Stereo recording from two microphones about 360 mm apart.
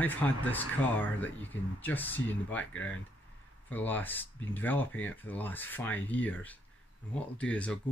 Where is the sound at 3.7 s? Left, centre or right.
Centre.